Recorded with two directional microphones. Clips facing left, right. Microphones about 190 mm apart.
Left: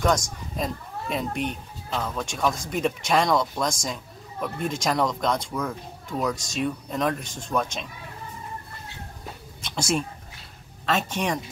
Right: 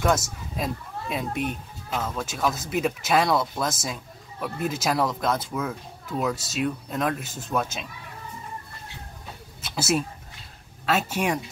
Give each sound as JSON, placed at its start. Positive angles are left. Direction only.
{"t": 0.0, "sound": "speech", "side_deg": -5}
{"t": 9.6, "sound": "speech", "side_deg": -5}